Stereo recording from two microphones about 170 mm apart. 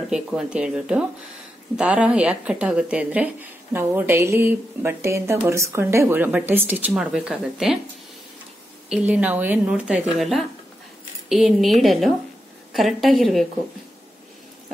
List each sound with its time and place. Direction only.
0.1 s a woman's voice: 5° right (ahead or behind)
8.9 s a woman's voice: 5° right (ahead or behind)